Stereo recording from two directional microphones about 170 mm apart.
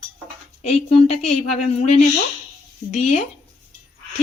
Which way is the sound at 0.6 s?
40° left (ahead or behind).